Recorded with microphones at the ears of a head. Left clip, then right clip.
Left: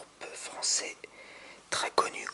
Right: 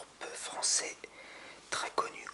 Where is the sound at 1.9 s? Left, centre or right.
Left.